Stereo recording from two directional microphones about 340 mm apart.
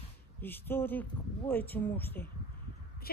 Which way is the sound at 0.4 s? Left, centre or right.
Centre.